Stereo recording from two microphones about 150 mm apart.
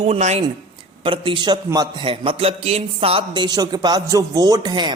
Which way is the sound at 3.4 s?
25° right (ahead or behind).